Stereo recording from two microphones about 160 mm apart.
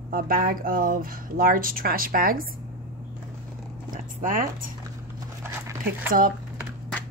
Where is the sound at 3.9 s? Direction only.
55° right (ahead or behind).